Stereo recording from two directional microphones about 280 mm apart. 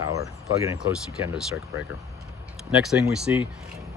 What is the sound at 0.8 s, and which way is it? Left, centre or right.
Speech, centre.